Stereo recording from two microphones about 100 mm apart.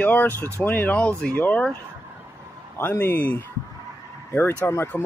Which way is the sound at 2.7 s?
20° left (ahead or behind).